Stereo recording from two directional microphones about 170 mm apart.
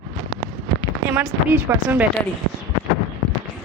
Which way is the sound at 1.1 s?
10° right (ahead or behind).